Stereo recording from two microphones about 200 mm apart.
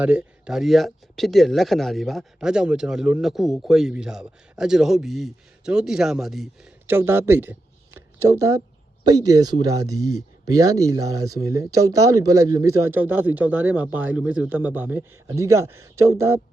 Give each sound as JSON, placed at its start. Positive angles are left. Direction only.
{"t": 0.0, "sound": "speech", "side_deg": -5}
{"t": 7.9, "sound": "a sound", "side_deg": -15}
{"t": 9.0, "sound": "speech", "side_deg": -20}